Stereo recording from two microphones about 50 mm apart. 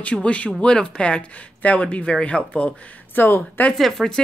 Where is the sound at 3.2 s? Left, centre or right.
Left.